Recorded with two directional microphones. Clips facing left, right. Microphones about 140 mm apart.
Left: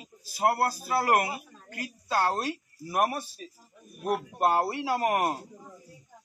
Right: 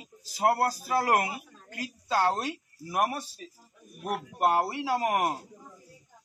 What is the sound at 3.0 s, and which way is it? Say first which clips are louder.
Speech: left 1 dB; 15° left (ahead or behind).